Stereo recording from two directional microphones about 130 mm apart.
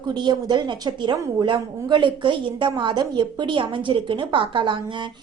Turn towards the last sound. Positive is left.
turn(degrees=-40)  # may be behind; listen again after turning